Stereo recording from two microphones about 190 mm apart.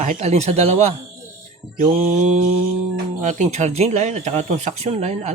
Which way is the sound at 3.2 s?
40° right (ahead or behind).